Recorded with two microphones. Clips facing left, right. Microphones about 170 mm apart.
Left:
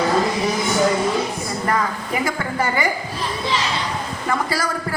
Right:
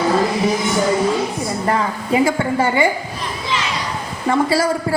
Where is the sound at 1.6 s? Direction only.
25° right (ahead or behind).